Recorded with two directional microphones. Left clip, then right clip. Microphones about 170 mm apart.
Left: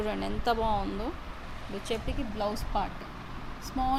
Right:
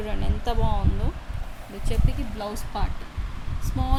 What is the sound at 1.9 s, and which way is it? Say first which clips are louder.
Speech: left 1 dB; centre (ahead or behind).